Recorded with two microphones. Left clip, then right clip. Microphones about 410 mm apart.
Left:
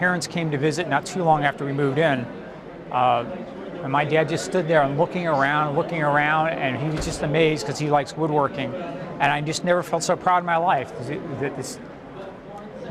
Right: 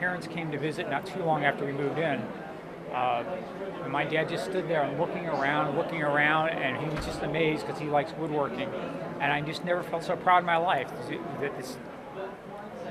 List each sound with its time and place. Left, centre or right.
0.0 s speech: left